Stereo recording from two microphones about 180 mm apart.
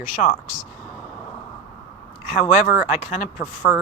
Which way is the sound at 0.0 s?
40° left (ahead or behind).